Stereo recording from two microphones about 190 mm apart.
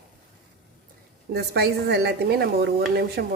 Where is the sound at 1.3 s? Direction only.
55° right (ahead or behind).